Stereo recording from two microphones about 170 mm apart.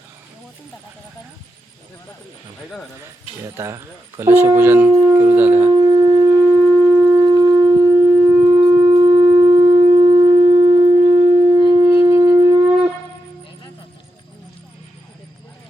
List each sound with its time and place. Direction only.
3.4 s speech: 15° right (ahead or behind)
5.7 s shofar: 25° right (ahead or behind)
6.4 s shofar: 10° right (ahead or behind)
7.3 s shofar: 25° right (ahead or behind)
8.4 s wind instrument: 25° right (ahead or behind)
8.9 s shofar: 35° right (ahead or behind)
9.3 s shofar: 15° right (ahead or behind)
9.6 s shofar: 30° right (ahead or behind)
11.9 s wind instrument: 20° right (ahead or behind)